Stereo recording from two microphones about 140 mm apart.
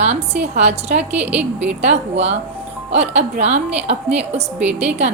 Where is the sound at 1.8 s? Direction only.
50° right (ahead or behind).